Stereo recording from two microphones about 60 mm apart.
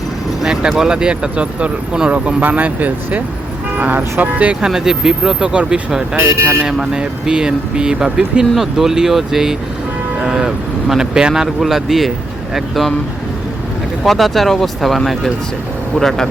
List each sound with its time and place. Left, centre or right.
0.4 s a sound: centre
0.7 s speech: centre
4.6 s speech: centre
6.2 s speech: right
6.7 s speech: centre
14.0 s speech: centre